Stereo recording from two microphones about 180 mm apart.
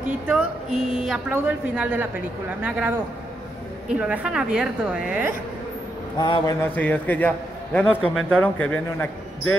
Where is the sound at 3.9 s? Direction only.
5° right (ahead or behind).